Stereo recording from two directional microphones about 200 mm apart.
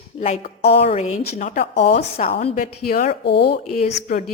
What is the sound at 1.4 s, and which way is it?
Speech, 40° left (ahead or behind).